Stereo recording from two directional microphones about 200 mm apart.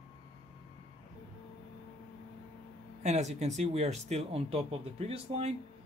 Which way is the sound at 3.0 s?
35° right (ahead or behind).